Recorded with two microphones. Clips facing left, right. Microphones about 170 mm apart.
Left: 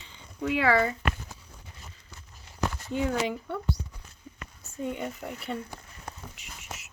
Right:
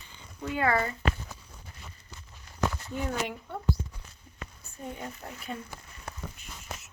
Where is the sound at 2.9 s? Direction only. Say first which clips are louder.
Left 5 dB; 90° left.